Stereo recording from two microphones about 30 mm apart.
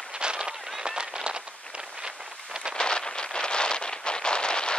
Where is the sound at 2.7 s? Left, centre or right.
Left.